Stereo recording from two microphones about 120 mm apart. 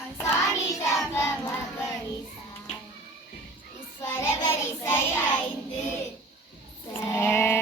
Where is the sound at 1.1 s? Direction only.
20° left (ahead or behind).